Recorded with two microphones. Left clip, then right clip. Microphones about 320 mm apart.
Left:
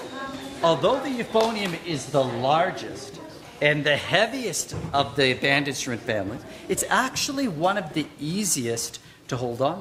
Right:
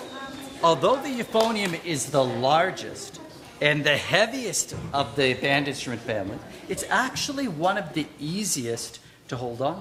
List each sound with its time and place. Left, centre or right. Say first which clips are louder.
0.6 s speech: even; right
4.9 s a man's voice: left 2 dB; centre; by 9.7 s left